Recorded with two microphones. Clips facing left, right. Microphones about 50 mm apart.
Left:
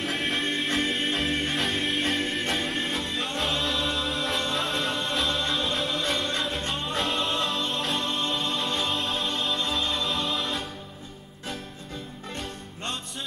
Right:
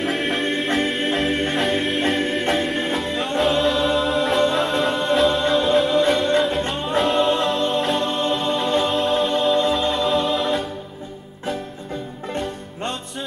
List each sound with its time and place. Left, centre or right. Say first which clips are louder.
0.0 s music: right 6 dB; centre
7.0 s music: right 10 dB; centre